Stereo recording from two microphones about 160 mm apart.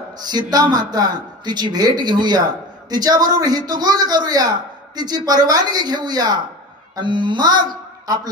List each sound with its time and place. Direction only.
0.2 s speech: 25° right (ahead or behind)